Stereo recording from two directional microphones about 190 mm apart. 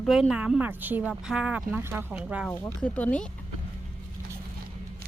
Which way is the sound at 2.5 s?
5° left (ahead or behind).